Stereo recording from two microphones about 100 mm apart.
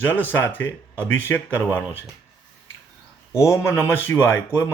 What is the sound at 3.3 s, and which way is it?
Speech, 30° left (ahead or behind).